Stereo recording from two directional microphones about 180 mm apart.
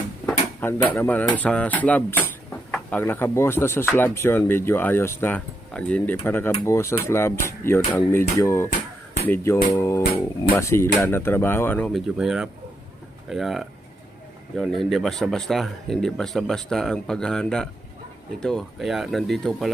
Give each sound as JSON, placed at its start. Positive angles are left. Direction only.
{"t": 0.6, "sound": "speech", "side_deg": 10}